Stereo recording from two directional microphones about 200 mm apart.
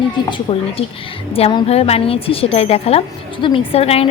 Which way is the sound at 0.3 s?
25° left (ahead or behind).